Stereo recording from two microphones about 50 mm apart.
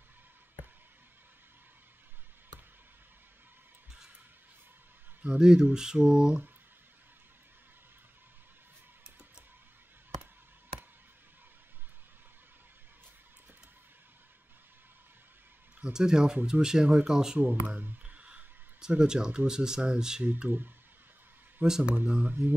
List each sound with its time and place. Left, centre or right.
5.2 s speech: centre
15.8 s speech: centre
17.6 s a sound: right
18.8 s speech: centre
20.4 s speech: right
21.9 s speech: right